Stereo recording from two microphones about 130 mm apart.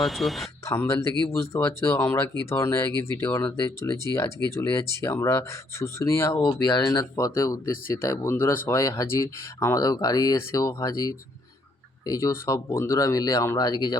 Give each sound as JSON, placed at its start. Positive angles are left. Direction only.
{"t": 0.0, "sound": "speech", "side_deg": 0}
{"t": 0.6, "sound": "speech", "side_deg": 20}
{"t": 6.7, "sound": "speech", "side_deg": 35}